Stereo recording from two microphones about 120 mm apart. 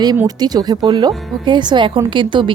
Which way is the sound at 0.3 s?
35° right (ahead or behind).